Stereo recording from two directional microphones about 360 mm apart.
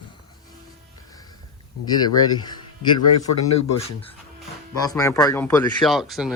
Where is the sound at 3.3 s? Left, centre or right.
Left.